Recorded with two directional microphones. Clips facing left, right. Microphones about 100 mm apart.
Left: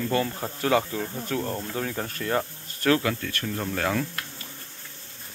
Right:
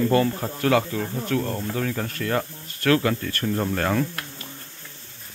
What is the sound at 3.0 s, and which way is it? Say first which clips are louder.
Speech: right 4 dB; 10° right (ahead or behind).